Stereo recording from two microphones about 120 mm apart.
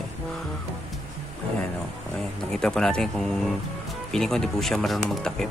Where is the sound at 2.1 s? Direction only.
5° left (ahead or behind).